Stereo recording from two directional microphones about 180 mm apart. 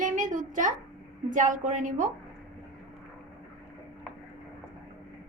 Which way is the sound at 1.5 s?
45° right (ahead or behind).